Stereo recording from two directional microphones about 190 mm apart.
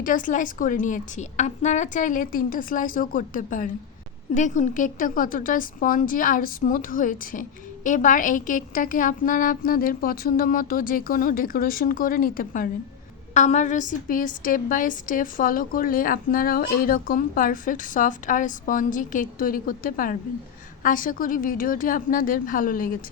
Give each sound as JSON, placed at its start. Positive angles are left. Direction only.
{"t": 0.0, "sound": "a woman's voice", "side_deg": 45}